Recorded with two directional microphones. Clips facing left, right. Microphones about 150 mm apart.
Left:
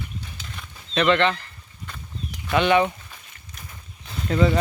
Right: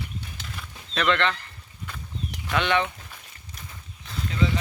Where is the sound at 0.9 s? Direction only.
5° left (ahead or behind).